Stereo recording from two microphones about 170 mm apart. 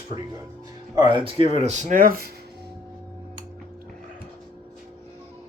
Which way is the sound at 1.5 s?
40° right (ahead or behind).